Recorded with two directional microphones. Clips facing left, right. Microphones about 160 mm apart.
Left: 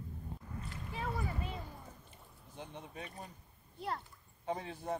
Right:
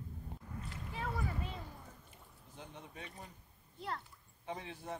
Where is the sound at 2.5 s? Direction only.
30° left (ahead or behind).